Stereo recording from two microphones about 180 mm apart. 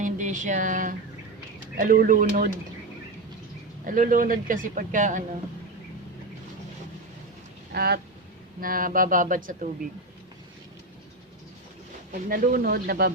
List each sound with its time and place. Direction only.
0.0 s a sound: 45° right (ahead or behind)
1.7 s a man's voice: 50° right (ahead or behind)
3.8 s a man's voice: 45° right (ahead or behind)
7.7 s speech: 60° right (ahead or behind)
8.6 s a man's voice: 50° right (ahead or behind)
12.1 s a man's voice: 50° right (ahead or behind)